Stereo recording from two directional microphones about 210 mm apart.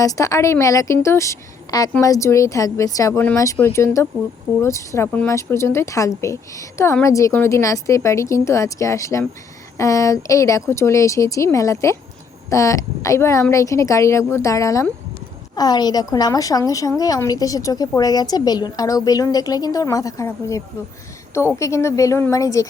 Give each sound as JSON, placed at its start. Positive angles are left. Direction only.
{"t": 0.0, "sound": "a woman's voice", "side_deg": 15}